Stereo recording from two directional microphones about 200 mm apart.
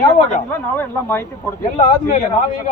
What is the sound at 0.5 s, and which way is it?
Speech, 10° left (ahead or behind).